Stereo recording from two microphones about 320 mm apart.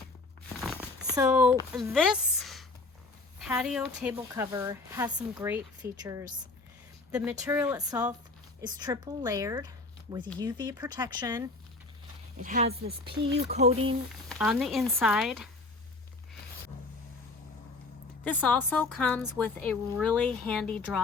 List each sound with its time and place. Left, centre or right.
1.1 s speech: centre
12.4 s speech: right
14.3 s a woman's voice: centre
18.3 s a woman's voice: centre